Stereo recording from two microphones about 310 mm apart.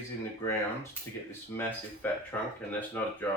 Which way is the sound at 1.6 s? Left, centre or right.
Centre.